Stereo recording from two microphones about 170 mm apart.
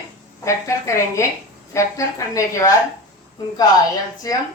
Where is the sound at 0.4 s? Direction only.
15° left (ahead or behind).